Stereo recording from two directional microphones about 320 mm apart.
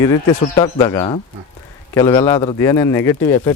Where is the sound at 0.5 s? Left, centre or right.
Centre.